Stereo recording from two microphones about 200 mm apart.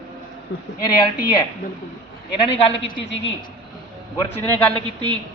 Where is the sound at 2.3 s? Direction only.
30° left (ahead or behind).